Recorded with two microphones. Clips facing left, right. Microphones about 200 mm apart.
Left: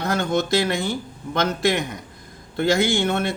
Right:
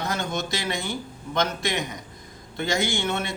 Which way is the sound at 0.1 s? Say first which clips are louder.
Left 7 dB; 55° left (ahead or behind).